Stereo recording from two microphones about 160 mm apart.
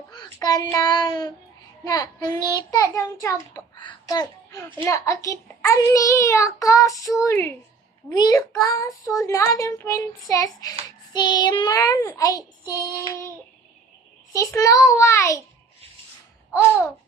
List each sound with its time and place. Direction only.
0.3 s a child's voice: 20° left (ahead or behind)
3.8 s a sound: 25° left (ahead or behind)
4.9 s speech: 20° left (ahead or behind)
14.3 s speech: 20° left (ahead or behind)